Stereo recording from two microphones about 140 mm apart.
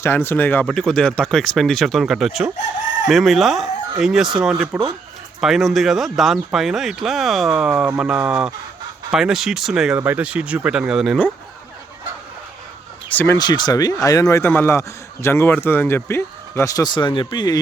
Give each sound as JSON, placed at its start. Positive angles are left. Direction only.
{"t": 0.0, "sound": "speech", "side_deg": 15}
{"t": 0.7, "sound": "speech", "side_deg": 5}
{"t": 13.1, "sound": "speech", "side_deg": 15}
{"t": 13.4, "sound": "a man's voice", "side_deg": 30}